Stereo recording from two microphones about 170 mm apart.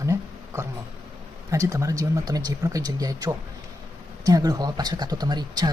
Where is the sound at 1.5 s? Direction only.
20° right (ahead or behind).